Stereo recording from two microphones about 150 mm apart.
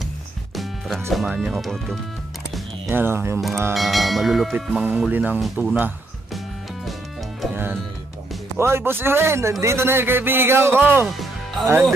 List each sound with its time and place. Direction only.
0.6 s music: centre (ahead or behind)
1.1 s a sound: 5° right (ahead or behind)
2.9 s speech: 15° right (ahead or behind)
3.7 s a sound: centre (ahead or behind)
5.4 s speech: 5° right (ahead or behind)
8.5 s speech: 15° right (ahead or behind)
11.1 s music: centre (ahead or behind)